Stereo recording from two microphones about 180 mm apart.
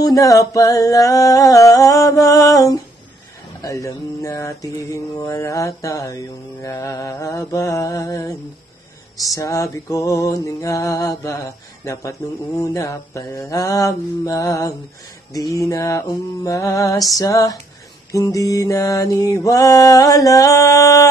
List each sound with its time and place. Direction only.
0.0 s mantra: 20° left (ahead or behind)